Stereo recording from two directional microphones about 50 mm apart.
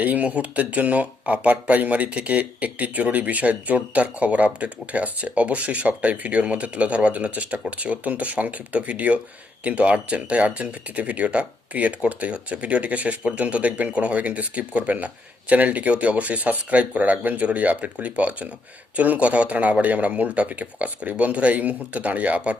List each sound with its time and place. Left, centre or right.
0.0 s speech: right